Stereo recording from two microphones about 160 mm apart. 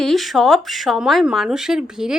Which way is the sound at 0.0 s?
Centre (ahead or behind).